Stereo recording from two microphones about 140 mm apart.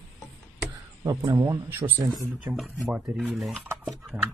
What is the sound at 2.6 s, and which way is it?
Speech, centre (ahead or behind).